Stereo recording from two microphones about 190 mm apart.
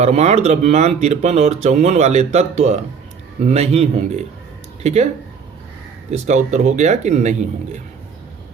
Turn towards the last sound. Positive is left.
turn(degrees=-40)  # may be behind; listen again after turning